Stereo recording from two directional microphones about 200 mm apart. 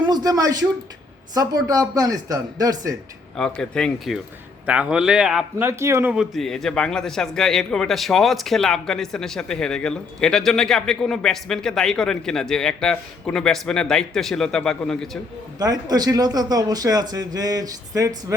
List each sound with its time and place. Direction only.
0.0 s a man's voice: 20° right (ahead or behind)
3.3 s a man's voice: 5° left (ahead or behind)
15.5 s speech: 20° right (ahead or behind)